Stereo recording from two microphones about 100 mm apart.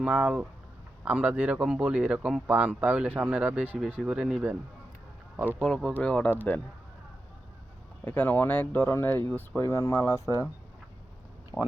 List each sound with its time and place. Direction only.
0.0 s speech: 10° right (ahead or behind)
5.6 s speech: 5° left (ahead or behind)
8.0 s speech: 15° left (ahead or behind)
11.5 s speech: 30° left (ahead or behind)